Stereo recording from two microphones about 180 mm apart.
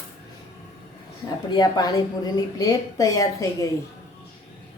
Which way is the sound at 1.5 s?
20° left (ahead or behind).